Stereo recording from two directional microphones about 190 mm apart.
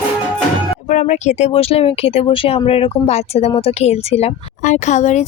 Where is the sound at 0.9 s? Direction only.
40° left (ahead or behind).